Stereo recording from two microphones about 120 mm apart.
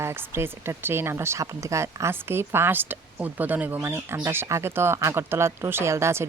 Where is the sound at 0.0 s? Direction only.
20° right (ahead or behind).